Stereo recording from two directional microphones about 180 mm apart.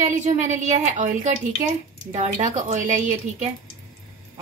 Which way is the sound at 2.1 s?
40° right (ahead or behind).